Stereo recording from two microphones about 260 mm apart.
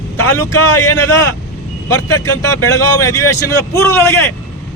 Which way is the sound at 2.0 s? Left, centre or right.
Left.